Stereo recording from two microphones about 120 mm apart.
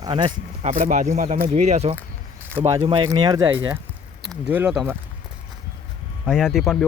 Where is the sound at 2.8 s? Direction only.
45° right (ahead or behind).